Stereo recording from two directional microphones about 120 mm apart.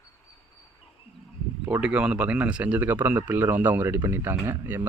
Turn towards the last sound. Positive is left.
turn(degrees=-20)  # may be behind; listen again after turning